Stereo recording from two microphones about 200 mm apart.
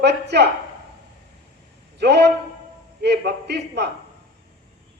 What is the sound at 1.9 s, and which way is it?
A man's voice, 55° right (ahead or behind).